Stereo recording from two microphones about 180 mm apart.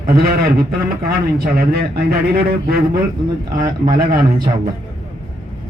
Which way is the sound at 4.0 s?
55° right (ahead or behind).